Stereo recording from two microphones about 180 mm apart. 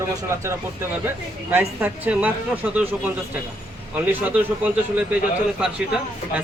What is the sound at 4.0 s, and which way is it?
A man's voice, 10° right (ahead or behind).